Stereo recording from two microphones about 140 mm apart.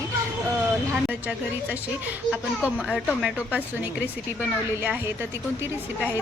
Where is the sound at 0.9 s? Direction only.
10° right (ahead or behind).